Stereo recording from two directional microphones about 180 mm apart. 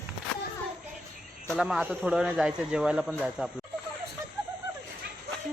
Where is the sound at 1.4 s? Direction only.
Centre (ahead or behind).